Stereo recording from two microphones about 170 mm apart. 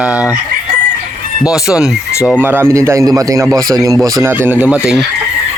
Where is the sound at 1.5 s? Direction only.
5° right (ahead or behind).